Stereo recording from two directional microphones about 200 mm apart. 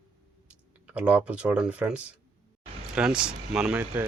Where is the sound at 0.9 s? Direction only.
5° right (ahead or behind).